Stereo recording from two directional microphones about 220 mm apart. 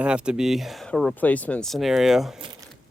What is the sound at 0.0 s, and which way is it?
Speech, 5° right (ahead or behind).